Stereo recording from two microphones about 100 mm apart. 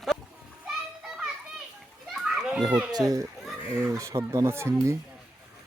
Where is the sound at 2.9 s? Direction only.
40° right (ahead or behind).